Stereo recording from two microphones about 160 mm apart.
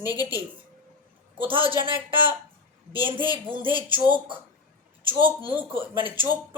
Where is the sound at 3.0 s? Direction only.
30° right (ahead or behind).